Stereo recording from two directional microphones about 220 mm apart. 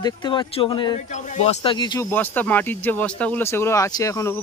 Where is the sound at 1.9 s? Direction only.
10° left (ahead or behind).